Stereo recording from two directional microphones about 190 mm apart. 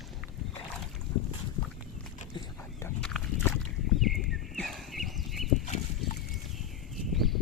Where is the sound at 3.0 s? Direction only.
5° left (ahead or behind).